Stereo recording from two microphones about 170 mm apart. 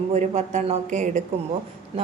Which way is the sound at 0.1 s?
45° right (ahead or behind).